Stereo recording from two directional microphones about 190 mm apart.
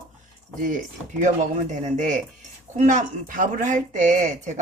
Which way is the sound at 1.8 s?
40° right (ahead or behind).